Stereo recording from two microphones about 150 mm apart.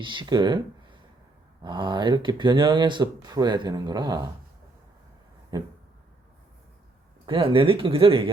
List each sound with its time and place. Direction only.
0.0 s speech: 30° right (ahead or behind)
7.3 s speech: 35° right (ahead or behind)